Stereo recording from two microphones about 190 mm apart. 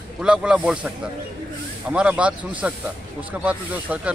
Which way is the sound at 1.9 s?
5° right (ahead or behind).